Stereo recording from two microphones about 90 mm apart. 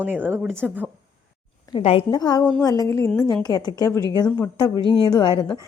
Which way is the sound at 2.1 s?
50° left (ahead or behind).